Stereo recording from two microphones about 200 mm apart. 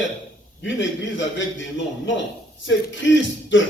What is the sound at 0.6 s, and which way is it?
A man's voice, 65° left (ahead or behind).